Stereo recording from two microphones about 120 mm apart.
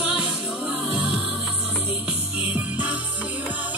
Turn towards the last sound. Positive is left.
turn(degrees=-15)  # may be behind; listen again after turning